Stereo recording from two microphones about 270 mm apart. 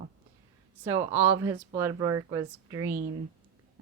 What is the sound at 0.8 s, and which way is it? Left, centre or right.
Speech, centre.